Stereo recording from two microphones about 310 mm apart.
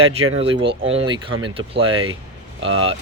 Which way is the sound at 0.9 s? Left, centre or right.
Centre.